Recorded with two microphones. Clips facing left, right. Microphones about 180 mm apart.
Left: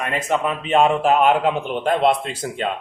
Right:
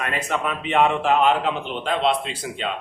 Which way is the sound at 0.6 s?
40° left (ahead or behind).